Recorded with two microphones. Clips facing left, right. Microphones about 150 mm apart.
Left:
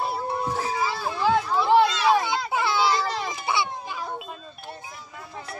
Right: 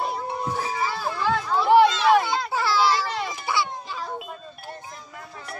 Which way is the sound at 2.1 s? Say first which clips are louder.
Right 2 dB; 20° left (ahead or behind).